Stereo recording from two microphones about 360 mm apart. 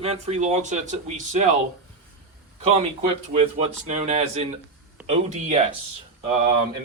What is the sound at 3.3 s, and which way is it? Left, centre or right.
Speech, centre.